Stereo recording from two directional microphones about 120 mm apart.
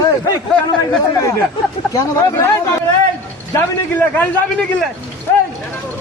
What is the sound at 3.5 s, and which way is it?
A man's voice, 15° left (ahead or behind).